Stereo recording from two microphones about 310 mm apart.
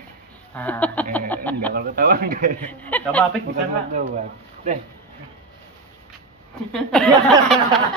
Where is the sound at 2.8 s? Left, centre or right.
Centre.